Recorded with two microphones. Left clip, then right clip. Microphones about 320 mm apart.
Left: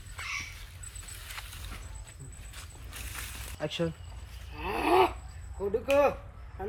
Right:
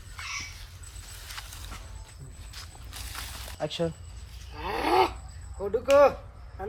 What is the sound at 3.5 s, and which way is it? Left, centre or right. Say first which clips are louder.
Speech: right 3 dB; right.